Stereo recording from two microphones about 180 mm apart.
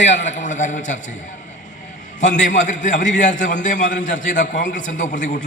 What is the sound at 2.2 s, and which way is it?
A man's voice, 45° left (ahead or behind).